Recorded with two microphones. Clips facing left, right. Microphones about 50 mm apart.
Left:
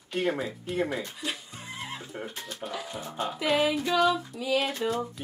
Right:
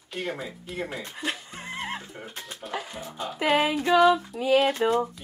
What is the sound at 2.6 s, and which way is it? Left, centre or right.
Speech, left.